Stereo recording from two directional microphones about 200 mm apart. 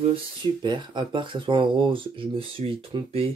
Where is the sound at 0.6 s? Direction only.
20° right (ahead or behind).